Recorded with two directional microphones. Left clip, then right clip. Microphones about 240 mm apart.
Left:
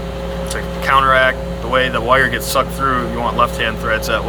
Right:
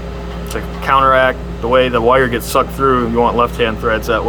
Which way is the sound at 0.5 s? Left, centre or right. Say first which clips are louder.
Right 1 dB; right.